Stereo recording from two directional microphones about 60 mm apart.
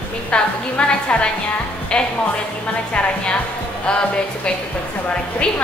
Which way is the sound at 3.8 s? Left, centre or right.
Centre.